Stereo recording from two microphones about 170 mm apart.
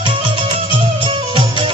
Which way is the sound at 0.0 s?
30° right (ahead or behind).